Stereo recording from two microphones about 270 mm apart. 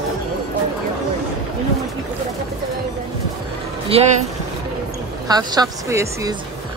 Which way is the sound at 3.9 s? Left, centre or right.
Right.